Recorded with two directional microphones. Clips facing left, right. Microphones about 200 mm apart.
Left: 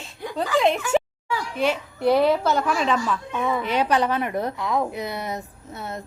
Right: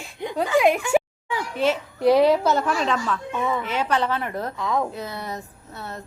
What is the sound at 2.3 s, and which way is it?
Speech, 5° right (ahead or behind).